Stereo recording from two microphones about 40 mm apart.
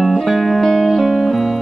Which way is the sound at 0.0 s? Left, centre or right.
Centre.